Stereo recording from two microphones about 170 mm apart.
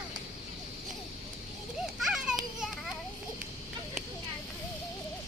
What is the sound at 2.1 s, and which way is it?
Children playing, 5° right (ahead or behind).